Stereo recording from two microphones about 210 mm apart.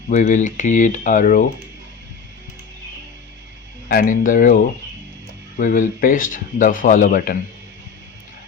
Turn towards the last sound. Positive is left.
turn(degrees=40)  # may be behind; listen again after turning